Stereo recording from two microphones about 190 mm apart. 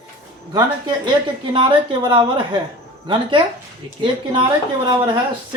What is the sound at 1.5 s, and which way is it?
A man's voice, 25° right (ahead or behind).